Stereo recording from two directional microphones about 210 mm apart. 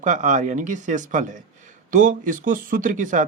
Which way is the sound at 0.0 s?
35° right (ahead or behind).